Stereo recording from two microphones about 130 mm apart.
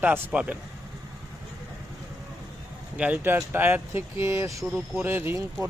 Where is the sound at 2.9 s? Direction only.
10° right (ahead or behind).